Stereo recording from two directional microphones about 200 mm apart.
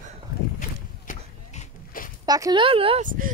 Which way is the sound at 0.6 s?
40° left (ahead or behind).